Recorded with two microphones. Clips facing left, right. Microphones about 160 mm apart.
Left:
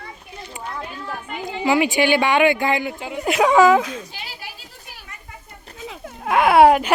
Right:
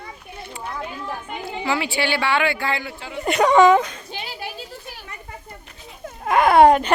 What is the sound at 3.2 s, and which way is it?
Speech, centre (ahead or behind).